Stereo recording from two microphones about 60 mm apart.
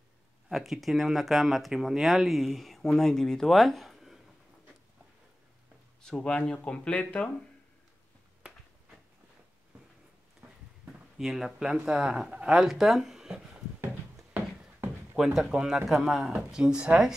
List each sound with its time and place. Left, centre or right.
0.5 s speech: centre
6.0 s speech: centre
11.1 s speech: centre
15.1 s speech: centre